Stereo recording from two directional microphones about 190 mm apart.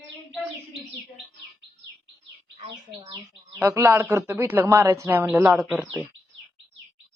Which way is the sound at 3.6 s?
15° right (ahead or behind).